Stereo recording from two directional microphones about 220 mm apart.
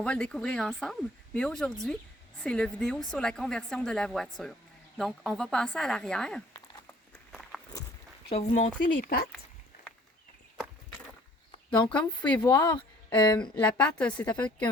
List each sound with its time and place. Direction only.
0.0 s speech: 5° left (ahead or behind)
8.3 s speech: 25° left (ahead or behind)
11.8 s speech: 5° left (ahead or behind)
12.4 s speech: 20° left (ahead or behind)
13.4 s a woman's voice: 5° left (ahead or behind)